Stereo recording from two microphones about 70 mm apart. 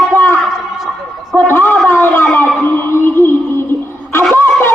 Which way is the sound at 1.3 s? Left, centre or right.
Left.